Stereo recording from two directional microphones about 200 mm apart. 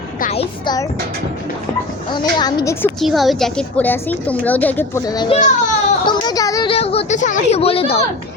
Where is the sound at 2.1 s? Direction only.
20° left (ahead or behind).